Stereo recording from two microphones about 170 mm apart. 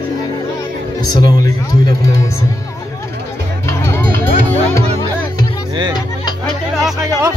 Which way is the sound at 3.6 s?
15° left (ahead or behind).